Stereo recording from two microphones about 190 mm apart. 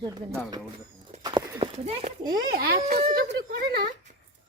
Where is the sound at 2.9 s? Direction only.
35° right (ahead or behind).